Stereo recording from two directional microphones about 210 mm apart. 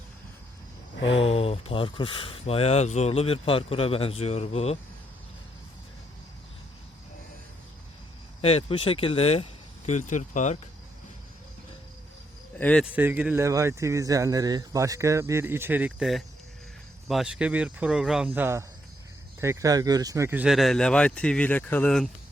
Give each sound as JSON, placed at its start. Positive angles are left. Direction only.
{"t": 1.1, "sound": "speech", "side_deg": 25}
{"t": 8.4, "sound": "speech", "side_deg": 30}
{"t": 12.5, "sound": "speech", "side_deg": 10}
{"t": 12.8, "sound": "speech", "side_deg": -10}